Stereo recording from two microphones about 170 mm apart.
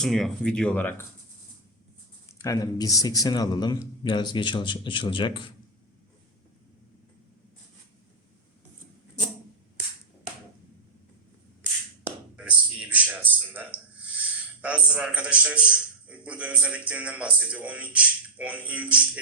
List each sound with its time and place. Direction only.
0.0 s speech: centre (ahead or behind)
2.4 s speech: 20° left (ahead or behind)
12.0 s speech: 10° right (ahead or behind)